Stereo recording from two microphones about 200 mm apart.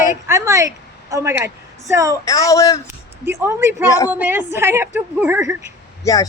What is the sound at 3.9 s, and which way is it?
Speech, 15° left (ahead or behind).